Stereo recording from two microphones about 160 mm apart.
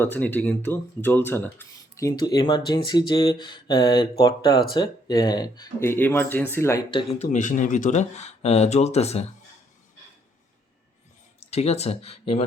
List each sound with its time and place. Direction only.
0.0 s speech: 10° left (ahead or behind)
6.9 s speech: 40° left (ahead or behind)
7.3 s speech: 55° left (ahead or behind)
11.3 s speech: 40° left (ahead or behind)